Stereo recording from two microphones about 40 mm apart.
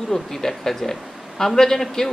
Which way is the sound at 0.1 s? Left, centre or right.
Centre.